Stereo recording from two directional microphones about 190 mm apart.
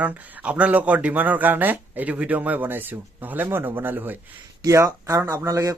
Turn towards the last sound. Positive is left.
turn(degrees=-15)  # may be behind; listen again after turning